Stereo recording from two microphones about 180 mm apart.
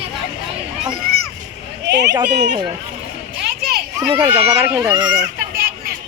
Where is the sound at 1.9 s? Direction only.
70° right (ahead or behind).